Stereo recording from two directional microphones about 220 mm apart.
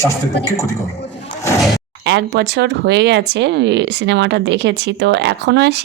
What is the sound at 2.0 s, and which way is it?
Speech, 50° right (ahead or behind).